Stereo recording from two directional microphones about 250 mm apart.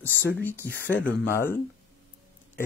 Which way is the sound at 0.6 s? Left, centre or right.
Left.